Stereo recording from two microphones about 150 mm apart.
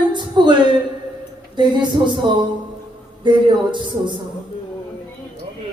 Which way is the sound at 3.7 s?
30° right (ahead or behind).